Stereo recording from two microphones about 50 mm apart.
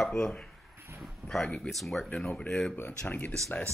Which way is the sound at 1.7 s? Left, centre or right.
Centre.